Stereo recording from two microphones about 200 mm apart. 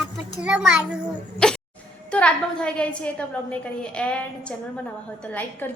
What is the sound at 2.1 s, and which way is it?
A woman's voice, 5° left (ahead or behind).